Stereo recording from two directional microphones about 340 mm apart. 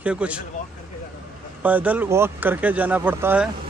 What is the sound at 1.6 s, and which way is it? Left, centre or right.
Speech, centre.